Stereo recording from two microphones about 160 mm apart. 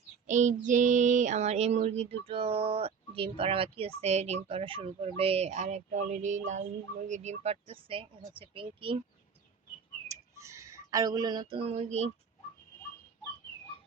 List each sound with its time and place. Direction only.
0.3 s child singing: 50° right (ahead or behind); by 8.0 s 35° right (ahead or behind)
8.4 s speech: 35° right (ahead or behind)
10.1 s a sound: 20° right (ahead or behind)
11.5 s child singing: 40° right (ahead or behind)